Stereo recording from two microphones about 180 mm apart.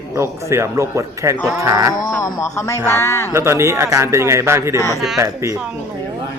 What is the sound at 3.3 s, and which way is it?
A man's voice, 15° right (ahead or behind).